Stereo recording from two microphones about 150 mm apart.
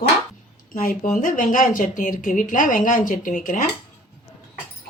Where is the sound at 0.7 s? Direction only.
60° left (ahead or behind).